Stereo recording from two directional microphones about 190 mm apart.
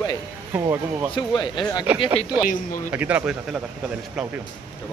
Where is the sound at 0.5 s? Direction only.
15° right (ahead or behind).